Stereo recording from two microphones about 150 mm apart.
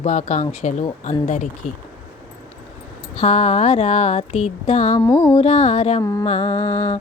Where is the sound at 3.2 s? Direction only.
45° left (ahead or behind).